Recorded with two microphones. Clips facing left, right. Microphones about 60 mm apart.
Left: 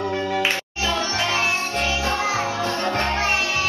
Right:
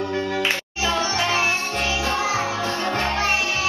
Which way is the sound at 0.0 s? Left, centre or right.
Centre.